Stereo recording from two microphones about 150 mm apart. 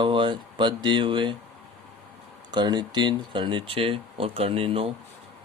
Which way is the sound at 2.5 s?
30° right (ahead or behind).